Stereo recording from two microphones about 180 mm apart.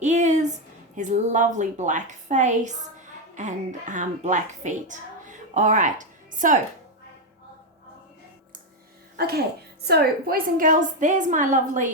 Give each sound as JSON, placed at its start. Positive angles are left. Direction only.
{"t": 0.0, "sound": "a sound", "side_deg": -40}
{"t": 0.9, "sound": "a woman's voice", "side_deg": -45}
{"t": 9.1, "sound": "a woman's voice", "side_deg": -60}